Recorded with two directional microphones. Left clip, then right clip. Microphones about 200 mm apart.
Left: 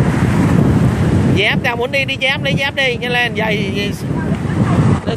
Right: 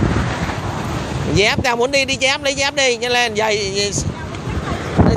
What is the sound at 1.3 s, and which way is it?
Speech, 20° right (ahead or behind).